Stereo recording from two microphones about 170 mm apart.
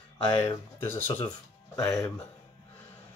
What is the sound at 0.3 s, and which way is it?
Speech, 15° left (ahead or behind).